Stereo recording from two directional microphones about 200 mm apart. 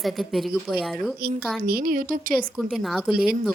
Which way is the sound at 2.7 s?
Centre (ahead or behind).